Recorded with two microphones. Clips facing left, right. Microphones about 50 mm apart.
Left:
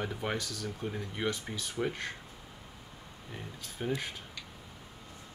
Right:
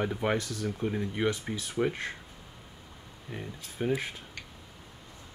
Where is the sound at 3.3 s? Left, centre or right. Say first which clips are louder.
Right 4 dB; centre.